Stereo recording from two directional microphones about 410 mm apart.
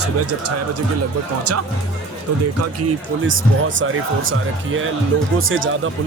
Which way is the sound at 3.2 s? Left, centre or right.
Right.